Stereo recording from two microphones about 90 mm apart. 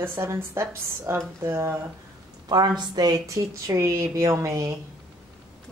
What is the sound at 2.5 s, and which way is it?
Speech, 50° right (ahead or behind).